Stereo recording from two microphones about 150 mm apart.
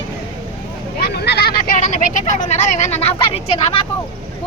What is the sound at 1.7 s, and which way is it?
Speech, 55° left (ahead or behind).